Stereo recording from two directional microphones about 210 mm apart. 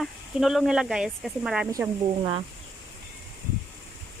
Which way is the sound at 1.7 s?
15° right (ahead or behind).